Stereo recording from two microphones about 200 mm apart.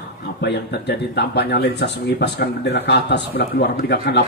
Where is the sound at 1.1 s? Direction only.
55° left (ahead or behind).